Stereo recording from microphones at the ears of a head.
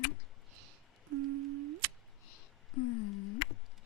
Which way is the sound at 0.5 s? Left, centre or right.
Right.